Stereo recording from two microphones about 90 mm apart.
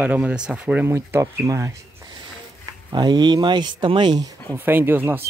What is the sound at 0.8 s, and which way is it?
Speech, 30° right (ahead or behind).